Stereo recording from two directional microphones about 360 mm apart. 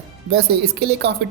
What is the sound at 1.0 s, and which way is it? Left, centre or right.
Speech, right.